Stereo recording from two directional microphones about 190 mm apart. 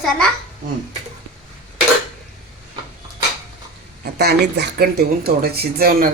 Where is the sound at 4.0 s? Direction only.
60° right (ahead or behind).